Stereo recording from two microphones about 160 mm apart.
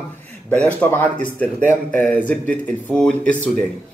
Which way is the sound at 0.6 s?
10° left (ahead or behind).